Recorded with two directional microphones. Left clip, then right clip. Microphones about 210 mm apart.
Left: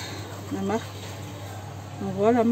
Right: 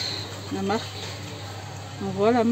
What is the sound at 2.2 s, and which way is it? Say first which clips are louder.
Speech: even; centre (ahead or behind).